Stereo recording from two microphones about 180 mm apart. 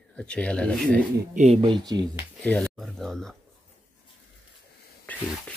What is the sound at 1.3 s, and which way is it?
Speech, 35° right (ahead or behind).